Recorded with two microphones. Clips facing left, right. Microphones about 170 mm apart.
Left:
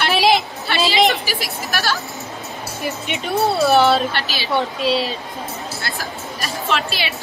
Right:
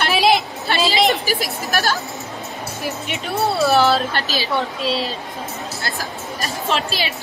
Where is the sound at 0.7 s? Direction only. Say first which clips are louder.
Even; 40° right (ahead or behind).